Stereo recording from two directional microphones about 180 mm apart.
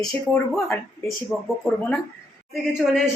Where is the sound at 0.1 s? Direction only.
Centre (ahead or behind).